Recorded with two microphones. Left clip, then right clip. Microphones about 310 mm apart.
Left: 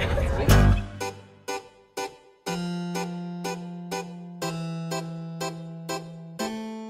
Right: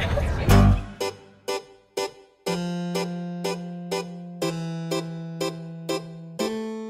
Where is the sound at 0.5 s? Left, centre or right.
Centre.